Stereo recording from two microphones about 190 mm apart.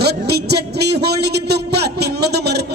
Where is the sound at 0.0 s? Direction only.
60° right (ahead or behind).